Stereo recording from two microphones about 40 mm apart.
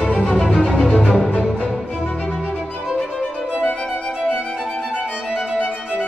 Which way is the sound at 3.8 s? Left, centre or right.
Centre.